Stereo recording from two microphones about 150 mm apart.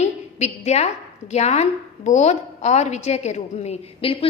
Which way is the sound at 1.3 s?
45° left (ahead or behind).